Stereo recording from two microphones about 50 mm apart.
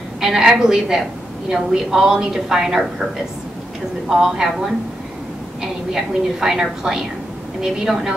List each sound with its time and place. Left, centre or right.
0.2 s a woman's voice: centre
4.1 s a woman's voice: centre